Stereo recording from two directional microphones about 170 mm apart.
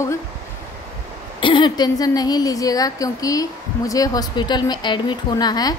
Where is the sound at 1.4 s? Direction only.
30° left (ahead or behind).